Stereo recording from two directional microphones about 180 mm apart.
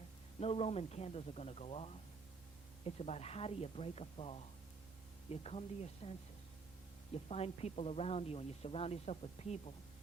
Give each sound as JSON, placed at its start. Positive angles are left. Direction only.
{"t": 0.3, "sound": "speech", "side_deg": 35}
{"t": 7.3, "sound": "speech", "side_deg": 35}